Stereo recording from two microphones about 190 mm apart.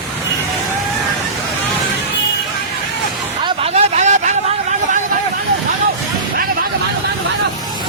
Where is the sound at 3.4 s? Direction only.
30° right (ahead or behind).